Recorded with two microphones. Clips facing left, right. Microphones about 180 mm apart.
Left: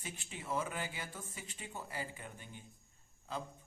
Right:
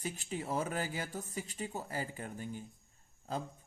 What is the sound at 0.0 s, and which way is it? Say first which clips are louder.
Speech: right 8 dB; 40° right (ahead or behind).